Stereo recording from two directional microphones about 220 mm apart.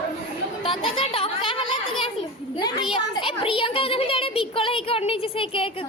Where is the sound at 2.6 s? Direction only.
20° left (ahead or behind).